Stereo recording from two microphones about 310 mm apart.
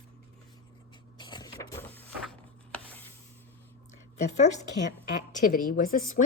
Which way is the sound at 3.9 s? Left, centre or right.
Left.